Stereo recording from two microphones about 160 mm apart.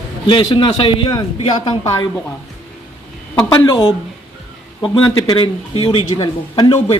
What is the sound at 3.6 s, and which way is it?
A man's voice, 30° left (ahead or behind).